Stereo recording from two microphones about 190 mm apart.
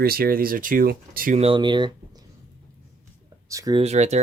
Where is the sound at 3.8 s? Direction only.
35° right (ahead or behind).